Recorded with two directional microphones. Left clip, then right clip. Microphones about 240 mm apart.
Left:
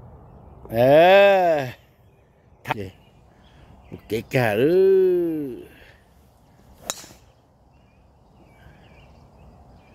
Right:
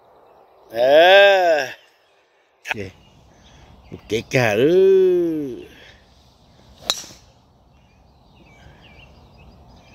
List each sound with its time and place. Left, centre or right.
0.7 s livestock: centre
2.6 s speech: centre
4.1 s a sound: centre